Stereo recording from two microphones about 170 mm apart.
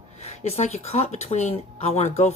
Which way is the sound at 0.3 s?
40° left (ahead or behind).